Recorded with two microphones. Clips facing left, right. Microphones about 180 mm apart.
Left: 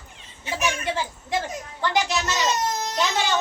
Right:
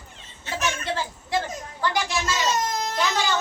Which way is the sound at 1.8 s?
20° left (ahead or behind).